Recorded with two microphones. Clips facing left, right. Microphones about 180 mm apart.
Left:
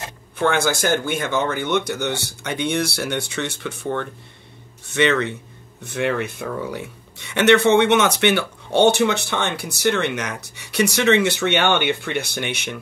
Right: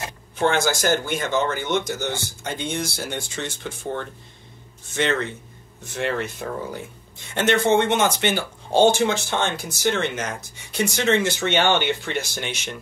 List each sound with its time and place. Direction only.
0.4 s speech: 55° left (ahead or behind)